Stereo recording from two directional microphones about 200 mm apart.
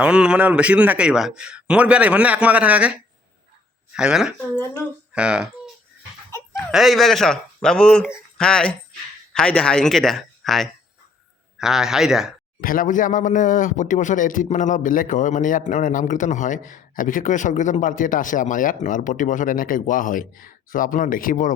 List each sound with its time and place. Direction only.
0.0 s a man's voice: 5° right (ahead or behind)
12.5 s speech: 45° left (ahead or behind)